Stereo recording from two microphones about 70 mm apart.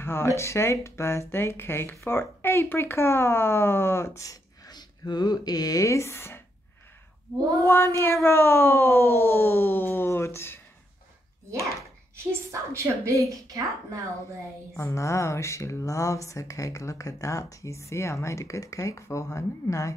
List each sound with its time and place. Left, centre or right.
0.0 s speech: left
4.6 s speech: left
7.6 s speech: left
12.2 s a woman's voice: right
14.8 s speech: left